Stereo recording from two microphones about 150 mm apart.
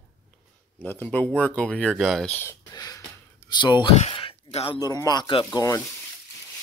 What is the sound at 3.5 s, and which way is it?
Speech, 30° left (ahead or behind).